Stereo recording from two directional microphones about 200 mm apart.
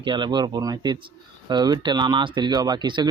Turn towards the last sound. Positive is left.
turn(degrees=-20)  # may be behind; listen again after turning